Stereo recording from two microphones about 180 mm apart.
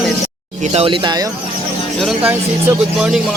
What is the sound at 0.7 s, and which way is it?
Speech, 30° right (ahead or behind).